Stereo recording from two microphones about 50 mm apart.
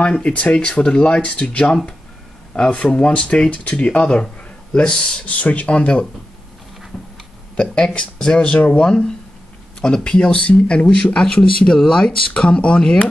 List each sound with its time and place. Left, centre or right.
0.0 s speech: left
5.2 s speech: left
7.5 s speech: centre